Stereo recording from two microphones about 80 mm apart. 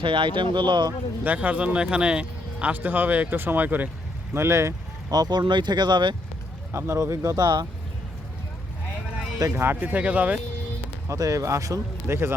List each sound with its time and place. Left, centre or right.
0.0 s speech: right
1.2 s speech: centre
4.4 s speech: right
5.1 s speech: right
6.7 s speech: right
7.4 s speech: right
9.5 s speech: right
11.1 s speech: right